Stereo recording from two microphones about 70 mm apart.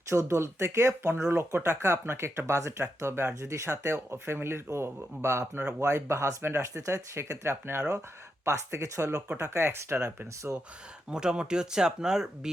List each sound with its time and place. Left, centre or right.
0.1 s speech: right
10.5 s speech: right